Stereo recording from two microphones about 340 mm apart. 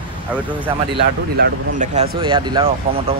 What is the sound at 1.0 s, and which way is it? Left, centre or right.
Speech, right.